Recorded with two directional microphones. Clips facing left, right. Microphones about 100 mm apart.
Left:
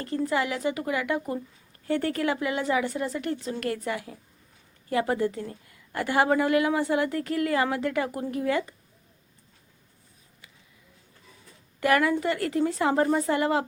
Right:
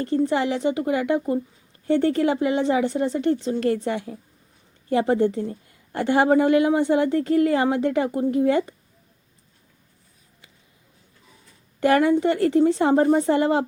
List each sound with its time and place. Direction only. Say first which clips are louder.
0.0 s a woman's voice: right 5 dB; 30° right (ahead or behind)
11.8 s a woman's voice: right 5 dB; 30° right (ahead or behind)